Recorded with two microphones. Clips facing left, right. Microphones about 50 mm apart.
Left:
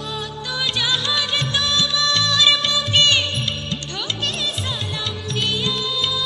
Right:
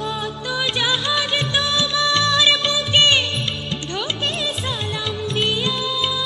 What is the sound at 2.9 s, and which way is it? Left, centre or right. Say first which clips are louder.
Music: right 2 dB; centre.